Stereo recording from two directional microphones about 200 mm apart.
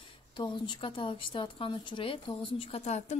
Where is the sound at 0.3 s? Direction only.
25° left (ahead or behind).